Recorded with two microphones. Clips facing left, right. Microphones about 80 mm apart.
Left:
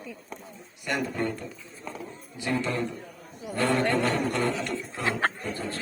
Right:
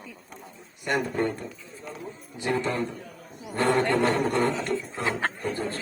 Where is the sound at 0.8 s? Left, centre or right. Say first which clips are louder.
Right 3 dB; right.